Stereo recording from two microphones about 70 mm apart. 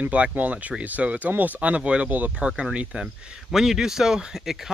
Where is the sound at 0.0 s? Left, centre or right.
Right.